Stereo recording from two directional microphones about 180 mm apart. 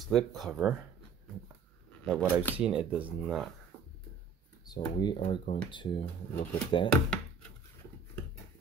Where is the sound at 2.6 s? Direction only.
5° right (ahead or behind).